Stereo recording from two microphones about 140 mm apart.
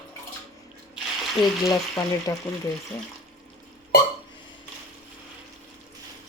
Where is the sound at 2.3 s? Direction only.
25° left (ahead or behind).